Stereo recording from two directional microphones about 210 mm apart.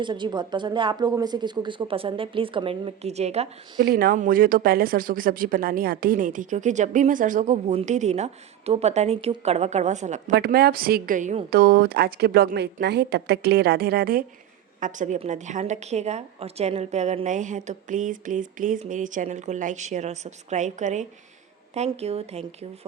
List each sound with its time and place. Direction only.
0.0 s speech: 20° right (ahead or behind)
3.8 s speech: 45° right (ahead or behind)
10.3 s a woman's voice: 50° right (ahead or behind); by 22.9 s 30° right (ahead or behind)